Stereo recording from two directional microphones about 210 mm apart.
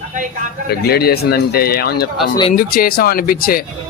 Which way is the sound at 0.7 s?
50° left (ahead or behind).